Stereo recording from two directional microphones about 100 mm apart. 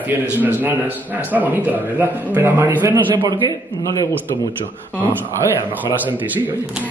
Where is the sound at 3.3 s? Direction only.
45° right (ahead or behind).